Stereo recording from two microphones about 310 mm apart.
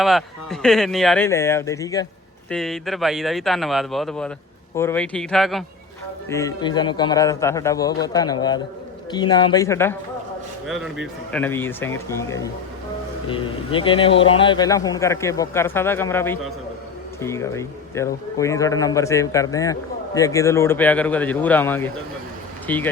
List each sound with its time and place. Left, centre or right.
0.0 s a man's voice: centre